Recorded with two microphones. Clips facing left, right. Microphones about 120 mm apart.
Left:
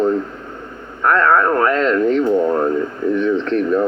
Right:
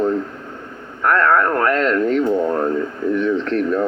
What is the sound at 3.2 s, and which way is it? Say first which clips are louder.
Speech: left 1 dB; 20° left (ahead or behind).